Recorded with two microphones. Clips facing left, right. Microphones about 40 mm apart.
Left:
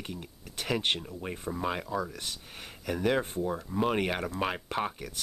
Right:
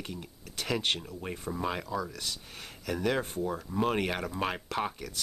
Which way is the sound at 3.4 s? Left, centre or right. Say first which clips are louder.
Left 1 dB; centre.